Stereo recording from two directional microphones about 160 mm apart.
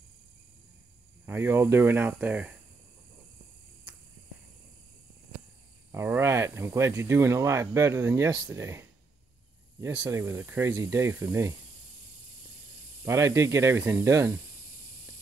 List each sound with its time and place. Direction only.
1.2 s speech: 15° right (ahead or behind)
5.9 s speech: 15° right (ahead or behind)
13.0 s speech: 20° right (ahead or behind)